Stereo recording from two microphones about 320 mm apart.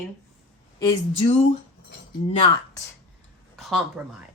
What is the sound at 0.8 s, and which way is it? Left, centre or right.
Speech, centre.